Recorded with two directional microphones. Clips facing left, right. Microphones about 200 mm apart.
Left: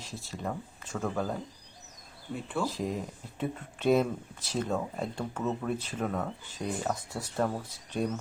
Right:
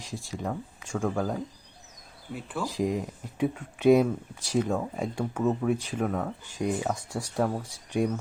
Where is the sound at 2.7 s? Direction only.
15° right (ahead or behind).